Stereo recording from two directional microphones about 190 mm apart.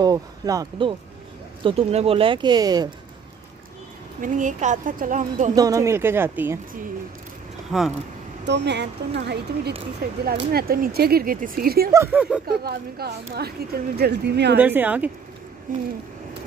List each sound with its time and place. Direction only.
0.0 s speech: 20° right (ahead or behind)
4.2 s speech: 40° right (ahead or behind)
5.5 s speech: 20° right (ahead or behind)
7.7 s speech: centre (ahead or behind)
8.5 s a woman's voice: 65° right (ahead or behind)
11.9 s speech: 10° right (ahead or behind)
12.4 s a woman's voice: 55° right (ahead or behind)
14.6 s speech: 10° right (ahead or behind)
15.7 s speech: 45° right (ahead or behind)